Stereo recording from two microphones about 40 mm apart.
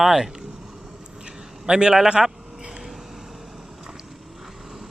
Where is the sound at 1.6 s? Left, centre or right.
Right.